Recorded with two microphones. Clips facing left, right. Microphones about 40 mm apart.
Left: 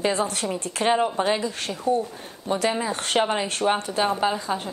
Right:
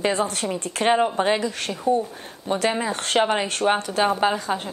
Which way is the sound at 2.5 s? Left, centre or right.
Right.